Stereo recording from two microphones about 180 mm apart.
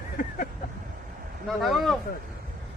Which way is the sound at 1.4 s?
Centre (ahead or behind).